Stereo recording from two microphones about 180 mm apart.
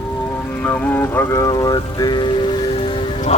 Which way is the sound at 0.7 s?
10° left (ahead or behind).